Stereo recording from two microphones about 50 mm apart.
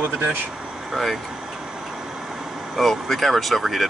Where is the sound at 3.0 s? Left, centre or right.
Centre.